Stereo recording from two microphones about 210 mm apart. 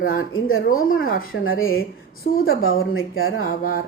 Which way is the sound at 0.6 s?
40° left (ahead or behind).